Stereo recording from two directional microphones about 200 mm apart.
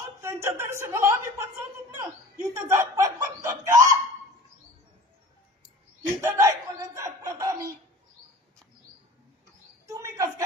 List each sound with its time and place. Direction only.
0.2 s speech: 15° right (ahead or behind)
2.7 s snicker: 15° right (ahead or behind)
6.2 s chuckle: 15° right (ahead or behind)
9.8 s a sound: 15° right (ahead or behind)